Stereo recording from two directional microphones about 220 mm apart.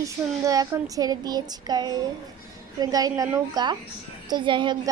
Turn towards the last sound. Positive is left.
turn(degrees=-20)  # may be behind; listen again after turning